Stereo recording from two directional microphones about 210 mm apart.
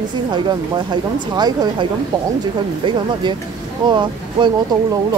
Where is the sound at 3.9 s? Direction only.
20° right (ahead or behind).